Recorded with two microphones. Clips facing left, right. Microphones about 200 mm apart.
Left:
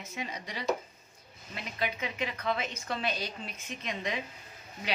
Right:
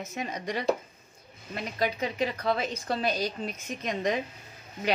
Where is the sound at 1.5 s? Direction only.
40° right (ahead or behind).